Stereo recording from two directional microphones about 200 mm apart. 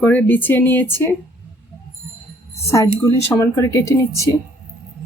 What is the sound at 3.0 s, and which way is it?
A woman's voice, 15° left (ahead or behind).